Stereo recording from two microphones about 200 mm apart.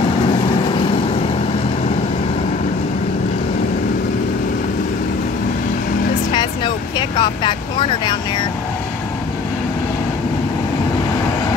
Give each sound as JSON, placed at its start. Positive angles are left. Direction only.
{"t": 6.3, "sound": "vehicle", "side_deg": 25}